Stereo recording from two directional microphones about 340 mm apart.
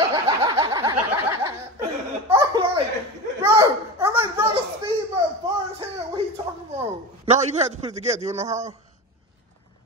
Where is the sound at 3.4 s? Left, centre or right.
Centre.